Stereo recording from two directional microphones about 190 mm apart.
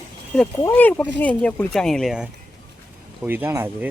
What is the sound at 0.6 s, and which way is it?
Speech, 10° left (ahead or behind).